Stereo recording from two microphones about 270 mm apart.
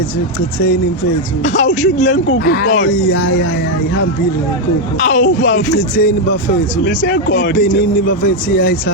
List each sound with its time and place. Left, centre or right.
1.5 s speech: left
4.9 s speech: left
5.4 s speech: left